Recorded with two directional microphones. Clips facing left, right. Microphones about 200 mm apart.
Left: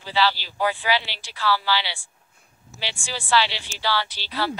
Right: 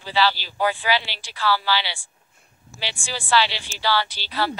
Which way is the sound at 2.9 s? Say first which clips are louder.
Right 1 dB; 40° right (ahead or behind).